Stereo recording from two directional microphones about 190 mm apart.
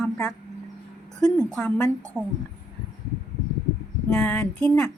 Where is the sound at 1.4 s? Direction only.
5° left (ahead or behind).